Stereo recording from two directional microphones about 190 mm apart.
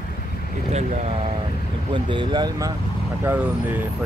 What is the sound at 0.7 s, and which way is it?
Speech, 35° right (ahead or behind).